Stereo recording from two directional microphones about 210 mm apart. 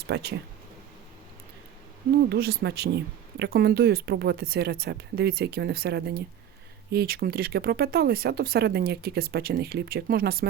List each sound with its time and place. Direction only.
0.1 s speech: 50° right (ahead or behind)
2.3 s speech: 50° right (ahead or behind)